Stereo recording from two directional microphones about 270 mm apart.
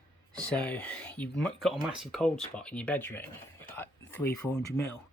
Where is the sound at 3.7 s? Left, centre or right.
Centre.